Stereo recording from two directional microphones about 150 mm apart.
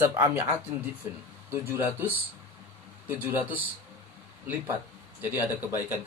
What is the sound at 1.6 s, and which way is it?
Speech, 15° right (ahead or behind).